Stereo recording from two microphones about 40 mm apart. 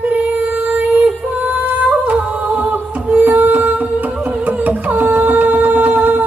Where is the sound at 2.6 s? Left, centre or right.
Right.